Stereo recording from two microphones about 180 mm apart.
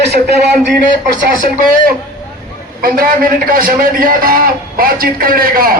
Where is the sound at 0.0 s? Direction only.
65° right (ahead or behind).